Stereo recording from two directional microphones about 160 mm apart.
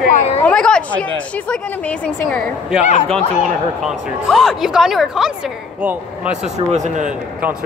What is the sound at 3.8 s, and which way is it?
A woman's voice, centre (ahead or behind).